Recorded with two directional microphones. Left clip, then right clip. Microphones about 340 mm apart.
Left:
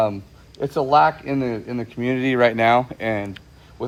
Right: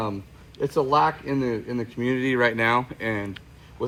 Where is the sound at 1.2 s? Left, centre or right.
Left.